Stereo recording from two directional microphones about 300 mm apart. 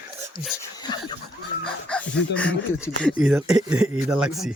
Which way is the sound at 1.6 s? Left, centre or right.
Centre.